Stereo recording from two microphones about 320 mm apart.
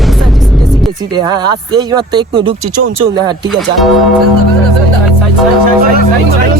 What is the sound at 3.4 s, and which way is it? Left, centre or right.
Speech, centre.